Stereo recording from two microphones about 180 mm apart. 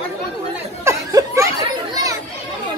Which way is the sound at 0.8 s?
15° right (ahead or behind).